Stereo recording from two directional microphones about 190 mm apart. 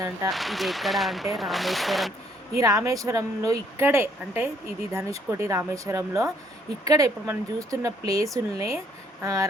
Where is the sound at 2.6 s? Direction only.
15° right (ahead or behind).